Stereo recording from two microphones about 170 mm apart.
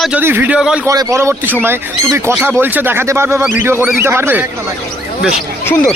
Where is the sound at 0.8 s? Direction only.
20° right (ahead or behind).